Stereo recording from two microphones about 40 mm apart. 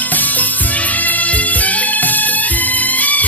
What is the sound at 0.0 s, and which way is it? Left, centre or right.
Music, left.